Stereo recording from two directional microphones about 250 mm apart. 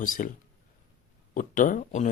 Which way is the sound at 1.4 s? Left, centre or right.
Left.